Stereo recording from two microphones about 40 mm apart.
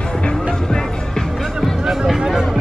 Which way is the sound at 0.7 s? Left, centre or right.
Centre.